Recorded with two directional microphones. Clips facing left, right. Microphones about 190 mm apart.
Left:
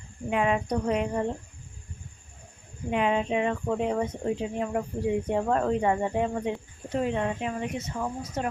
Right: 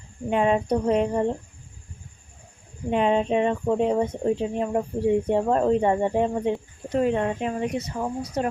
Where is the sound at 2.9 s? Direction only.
30° right (ahead or behind).